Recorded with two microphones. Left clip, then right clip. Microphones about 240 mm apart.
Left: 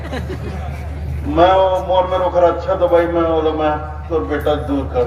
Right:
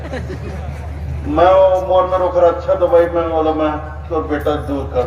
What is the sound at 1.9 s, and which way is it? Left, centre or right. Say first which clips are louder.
A man's voice: right 1 dB; left.